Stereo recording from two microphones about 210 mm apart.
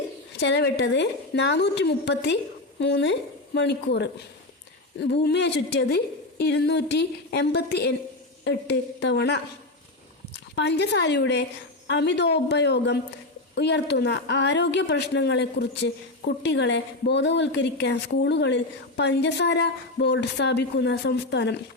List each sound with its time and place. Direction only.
0.3 s a woman's voice: 55° left (ahead or behind)